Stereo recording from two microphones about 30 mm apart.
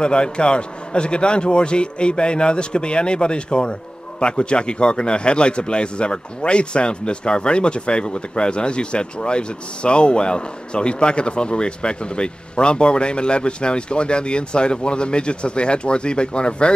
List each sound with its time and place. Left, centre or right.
0.0 s a man's voice: left